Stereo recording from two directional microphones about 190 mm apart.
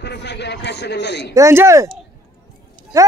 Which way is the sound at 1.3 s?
15° right (ahead or behind).